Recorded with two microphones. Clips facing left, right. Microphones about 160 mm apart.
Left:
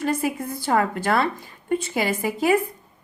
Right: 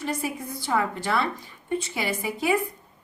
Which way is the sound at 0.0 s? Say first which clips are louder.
Left 6 dB; 50° left (ahead or behind).